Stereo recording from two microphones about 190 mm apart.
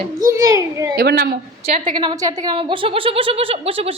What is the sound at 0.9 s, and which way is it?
Speech, 55° right (ahead or behind).